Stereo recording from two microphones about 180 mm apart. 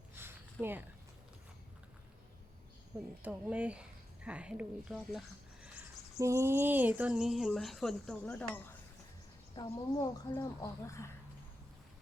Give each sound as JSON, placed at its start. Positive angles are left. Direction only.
{"t": 0.1, "sound": "a sound", "side_deg": -15}
{"t": 2.9, "sound": "speech", "side_deg": -15}
{"t": 6.1, "sound": "speech", "side_deg": -15}
{"t": 9.6, "sound": "speech", "side_deg": 25}